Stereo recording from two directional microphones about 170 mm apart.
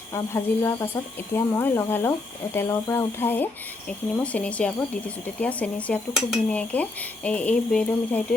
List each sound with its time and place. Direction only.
0.1 s speech: 15° left (ahead or behind)